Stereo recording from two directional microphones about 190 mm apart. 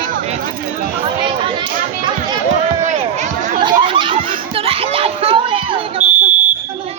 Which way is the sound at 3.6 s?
25° right (ahead or behind).